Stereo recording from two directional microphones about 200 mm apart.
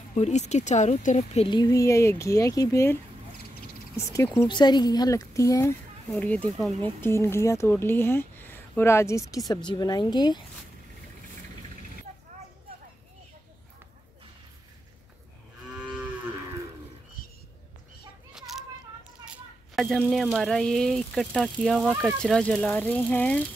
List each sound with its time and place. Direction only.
0.1 s speech: 35° left (ahead or behind)
15.7 s moo: 5° right (ahead or behind)
18.3 s a sound: centre (ahead or behind)
19.2 s speech: centre (ahead or behind)